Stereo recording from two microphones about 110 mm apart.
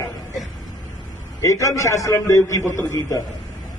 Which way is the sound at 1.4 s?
30° left (ahead or behind).